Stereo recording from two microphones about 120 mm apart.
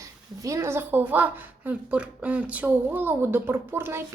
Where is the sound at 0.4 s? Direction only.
25° right (ahead or behind).